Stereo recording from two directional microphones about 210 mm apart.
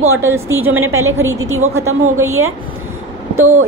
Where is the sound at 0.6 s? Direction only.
80° right.